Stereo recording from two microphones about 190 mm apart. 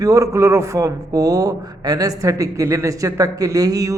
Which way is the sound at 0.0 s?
15° right (ahead or behind).